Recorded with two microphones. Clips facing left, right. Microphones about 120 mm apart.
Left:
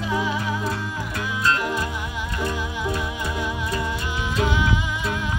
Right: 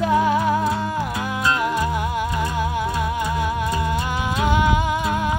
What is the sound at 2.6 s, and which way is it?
Music, 55° right (ahead or behind).